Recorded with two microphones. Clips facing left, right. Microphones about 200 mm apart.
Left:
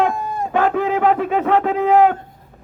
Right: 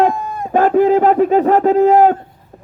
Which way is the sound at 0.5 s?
35° right (ahead or behind).